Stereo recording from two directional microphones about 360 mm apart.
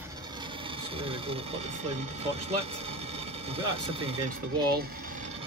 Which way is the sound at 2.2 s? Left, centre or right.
Centre.